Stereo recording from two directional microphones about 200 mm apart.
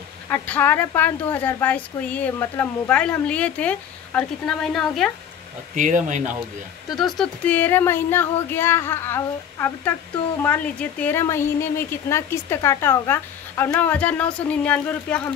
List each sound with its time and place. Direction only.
0.3 s speech: 10° left (ahead or behind)
5.8 s speech: 40° right (ahead or behind)
7.0 s speech: centre (ahead or behind)